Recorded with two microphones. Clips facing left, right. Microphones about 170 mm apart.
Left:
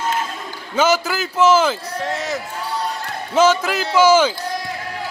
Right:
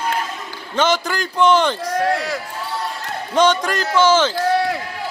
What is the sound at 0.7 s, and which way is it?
A man's voice, 10° left (ahead or behind).